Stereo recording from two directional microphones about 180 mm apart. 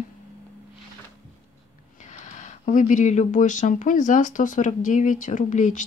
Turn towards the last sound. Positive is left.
turn(degrees=45)  # may be behind; listen again after turning